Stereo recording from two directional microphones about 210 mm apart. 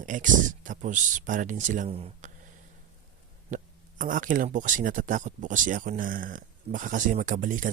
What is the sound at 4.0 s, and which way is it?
Speech, 40° right (ahead or behind).